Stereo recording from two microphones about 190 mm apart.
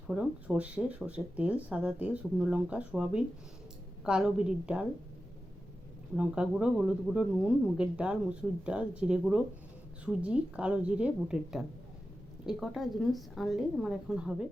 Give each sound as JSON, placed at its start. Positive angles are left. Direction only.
{"t": 0.1, "sound": "a woman's voice", "side_deg": -5}
{"t": 6.1, "sound": "a woman's voice", "side_deg": -5}